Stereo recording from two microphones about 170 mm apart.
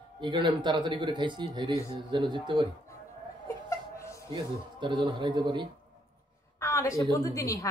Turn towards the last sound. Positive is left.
turn(degrees=20)  # may be behind; listen again after turning